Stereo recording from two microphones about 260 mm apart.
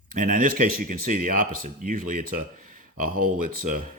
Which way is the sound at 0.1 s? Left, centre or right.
Right.